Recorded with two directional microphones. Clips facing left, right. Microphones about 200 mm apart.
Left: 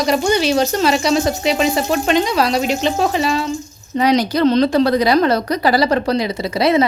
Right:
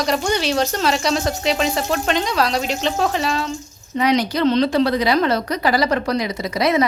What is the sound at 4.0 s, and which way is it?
A woman's voice, 35° left (ahead or behind).